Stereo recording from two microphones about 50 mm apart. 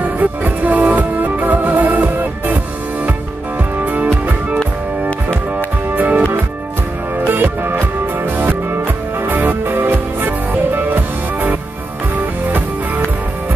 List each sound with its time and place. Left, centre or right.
0.2 s music: right
3.8 s music: right
5.9 s music: right
7.2 s music: right